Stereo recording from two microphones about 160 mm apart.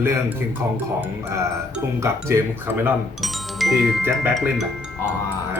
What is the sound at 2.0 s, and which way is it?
Speech, 15° right (ahead or behind).